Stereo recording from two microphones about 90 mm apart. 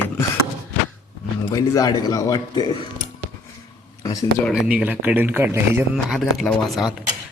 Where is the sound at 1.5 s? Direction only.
45° left (ahead or behind).